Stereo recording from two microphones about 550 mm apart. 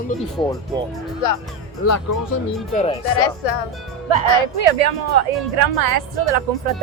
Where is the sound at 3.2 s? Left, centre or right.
Left.